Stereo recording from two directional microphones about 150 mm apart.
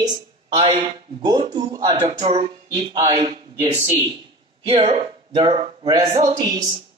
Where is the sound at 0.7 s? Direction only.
30° right (ahead or behind).